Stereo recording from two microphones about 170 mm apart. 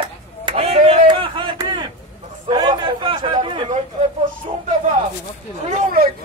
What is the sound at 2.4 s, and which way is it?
Chatter, 25° right (ahead or behind).